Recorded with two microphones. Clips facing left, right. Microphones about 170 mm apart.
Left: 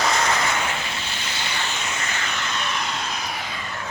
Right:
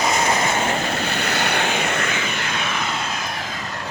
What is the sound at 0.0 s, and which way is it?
Vehicle, 20° right (ahead or behind).